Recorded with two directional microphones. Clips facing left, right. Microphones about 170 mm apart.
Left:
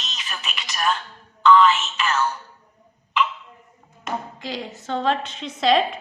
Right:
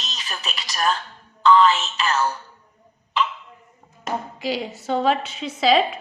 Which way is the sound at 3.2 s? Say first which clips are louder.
Left 1 dB; 35° right (ahead or behind).